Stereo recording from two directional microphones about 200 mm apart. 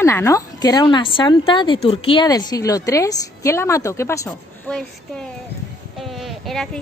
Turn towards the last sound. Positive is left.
turn(degrees=0)  # may be behind; listen again after turning